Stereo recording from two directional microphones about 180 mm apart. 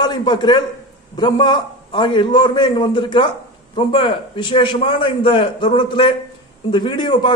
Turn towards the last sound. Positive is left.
turn(degrees=25)  # may be behind; listen again after turning